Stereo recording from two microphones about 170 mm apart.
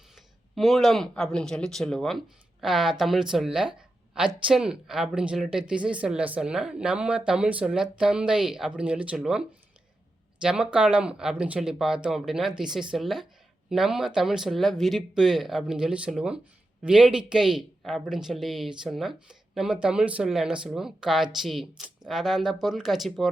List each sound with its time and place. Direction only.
0.5 s speech: centre (ahead or behind)
10.4 s speech: 5° right (ahead or behind)